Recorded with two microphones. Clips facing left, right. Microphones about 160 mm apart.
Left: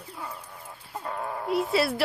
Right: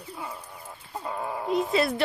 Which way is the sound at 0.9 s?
5° right (ahead or behind).